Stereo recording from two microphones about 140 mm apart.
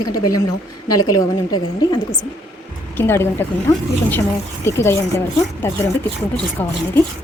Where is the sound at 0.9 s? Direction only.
25° left (ahead or behind).